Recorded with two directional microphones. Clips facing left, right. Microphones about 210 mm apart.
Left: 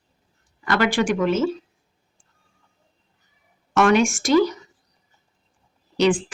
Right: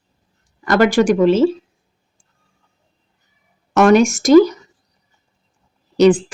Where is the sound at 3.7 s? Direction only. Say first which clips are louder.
Right 6 dB; 40° right (ahead or behind).